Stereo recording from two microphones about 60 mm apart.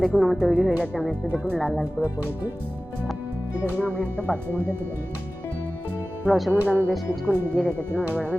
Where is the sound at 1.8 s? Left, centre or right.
Right.